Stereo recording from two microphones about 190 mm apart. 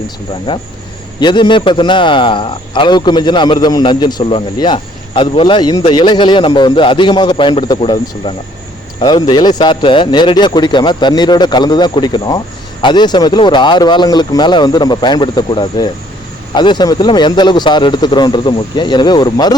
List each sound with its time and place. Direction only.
0.5 s speech: 25° left (ahead or behind)